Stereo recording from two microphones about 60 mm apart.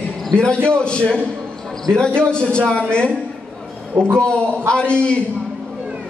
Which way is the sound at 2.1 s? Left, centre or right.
Centre.